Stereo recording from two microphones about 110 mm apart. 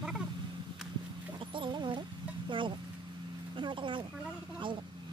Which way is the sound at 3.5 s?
50° right (ahead or behind).